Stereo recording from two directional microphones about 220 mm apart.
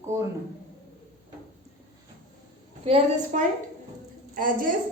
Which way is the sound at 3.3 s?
35° right (ahead or behind).